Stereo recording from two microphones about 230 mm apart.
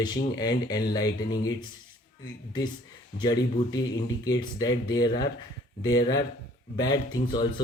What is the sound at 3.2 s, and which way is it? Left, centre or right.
Speech, centre.